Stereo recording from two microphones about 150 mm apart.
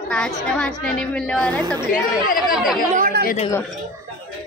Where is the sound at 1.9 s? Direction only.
70° left (ahead or behind).